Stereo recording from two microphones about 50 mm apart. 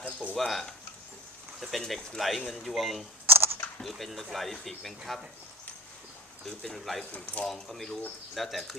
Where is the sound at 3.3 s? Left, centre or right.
Right.